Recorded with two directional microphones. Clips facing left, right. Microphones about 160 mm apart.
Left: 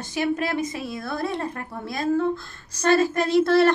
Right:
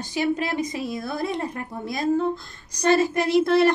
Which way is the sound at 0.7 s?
20° right (ahead or behind).